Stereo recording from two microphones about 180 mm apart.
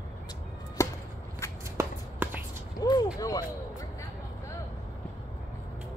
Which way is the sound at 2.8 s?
20° left (ahead or behind).